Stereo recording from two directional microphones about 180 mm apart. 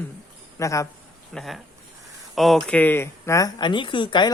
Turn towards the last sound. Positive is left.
turn(degrees=25)  # may be behind; listen again after turning